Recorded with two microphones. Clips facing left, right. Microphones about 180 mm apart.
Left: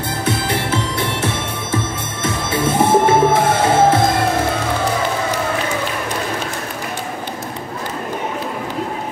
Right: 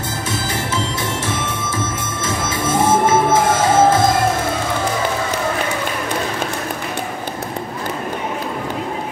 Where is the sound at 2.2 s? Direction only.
60° left (ahead or behind).